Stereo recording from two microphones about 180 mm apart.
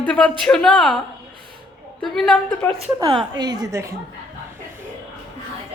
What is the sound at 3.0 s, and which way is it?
Speech, 25° right (ahead or behind).